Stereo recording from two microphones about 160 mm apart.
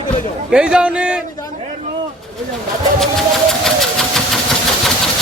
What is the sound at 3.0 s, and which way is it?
Engine, centre (ahead or behind).